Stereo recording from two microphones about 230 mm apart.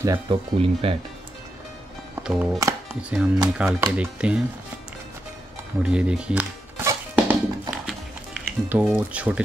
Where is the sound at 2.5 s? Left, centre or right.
Centre.